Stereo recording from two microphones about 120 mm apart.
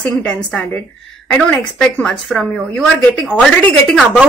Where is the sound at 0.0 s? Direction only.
10° left (ahead or behind).